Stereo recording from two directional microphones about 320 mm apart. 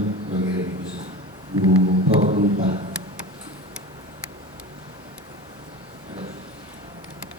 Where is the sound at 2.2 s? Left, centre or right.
Right.